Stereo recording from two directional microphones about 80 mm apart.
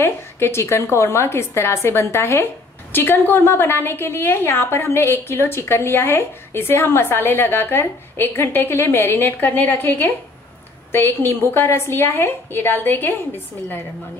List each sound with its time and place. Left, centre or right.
0.0 s a woman's voice: left